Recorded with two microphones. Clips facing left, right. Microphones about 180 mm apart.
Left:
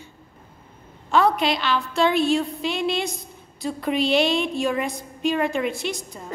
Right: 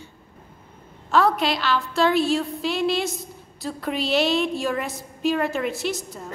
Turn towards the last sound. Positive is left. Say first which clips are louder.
# right 2 dB
turn(degrees=-5)  # may be behind; listen again after turning